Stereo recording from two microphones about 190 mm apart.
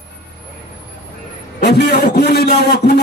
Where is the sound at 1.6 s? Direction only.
60° left (ahead or behind).